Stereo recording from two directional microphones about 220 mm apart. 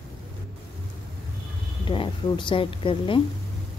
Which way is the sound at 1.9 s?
20° left (ahead or behind).